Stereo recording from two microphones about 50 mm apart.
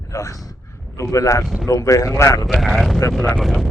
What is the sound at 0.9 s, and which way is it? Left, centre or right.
Speech, left.